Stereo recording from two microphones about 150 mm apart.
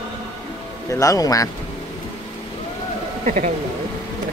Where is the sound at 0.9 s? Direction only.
20° left (ahead or behind).